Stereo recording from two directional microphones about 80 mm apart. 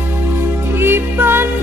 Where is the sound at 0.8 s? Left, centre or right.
Right.